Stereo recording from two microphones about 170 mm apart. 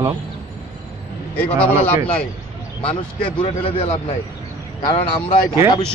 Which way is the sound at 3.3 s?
30° left (ahead or behind).